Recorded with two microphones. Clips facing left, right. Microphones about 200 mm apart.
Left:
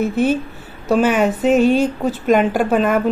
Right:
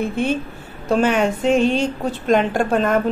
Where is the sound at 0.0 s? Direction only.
5° left (ahead or behind).